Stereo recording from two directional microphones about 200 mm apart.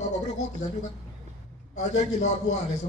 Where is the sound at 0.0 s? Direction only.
35° left (ahead or behind).